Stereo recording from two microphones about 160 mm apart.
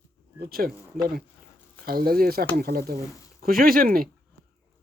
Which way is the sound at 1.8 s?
70° right (ahead or behind).